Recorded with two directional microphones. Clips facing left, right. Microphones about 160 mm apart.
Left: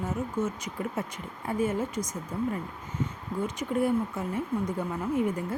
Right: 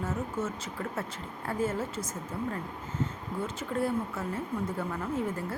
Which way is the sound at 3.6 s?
15° left (ahead or behind).